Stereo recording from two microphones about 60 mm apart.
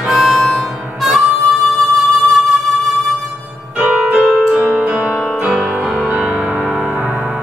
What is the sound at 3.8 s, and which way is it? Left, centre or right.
Keyboard, centre.